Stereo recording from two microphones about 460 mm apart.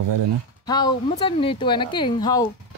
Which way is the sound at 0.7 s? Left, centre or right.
Centre.